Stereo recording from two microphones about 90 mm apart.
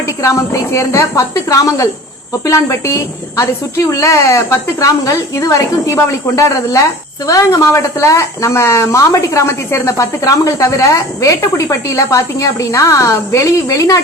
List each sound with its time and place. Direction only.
0.2 s speech: 35° left (ahead or behind)